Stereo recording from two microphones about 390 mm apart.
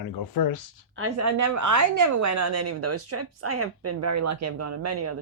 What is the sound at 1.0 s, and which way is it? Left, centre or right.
A woman's voice, right.